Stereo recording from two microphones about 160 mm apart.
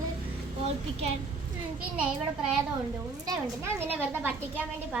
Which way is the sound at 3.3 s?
15° right (ahead or behind).